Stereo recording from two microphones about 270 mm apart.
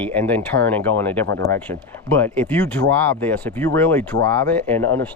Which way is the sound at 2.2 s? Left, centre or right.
Centre.